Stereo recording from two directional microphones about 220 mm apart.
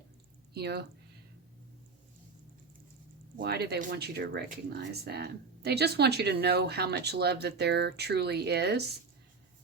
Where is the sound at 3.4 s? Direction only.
45° right (ahead or behind).